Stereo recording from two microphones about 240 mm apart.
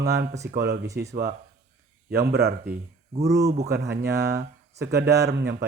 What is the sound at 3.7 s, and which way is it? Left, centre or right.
Speech, right.